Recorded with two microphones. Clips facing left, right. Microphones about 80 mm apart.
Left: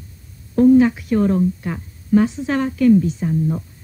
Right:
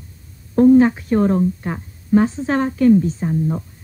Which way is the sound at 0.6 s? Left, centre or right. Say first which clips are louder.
Right 1 dB; right.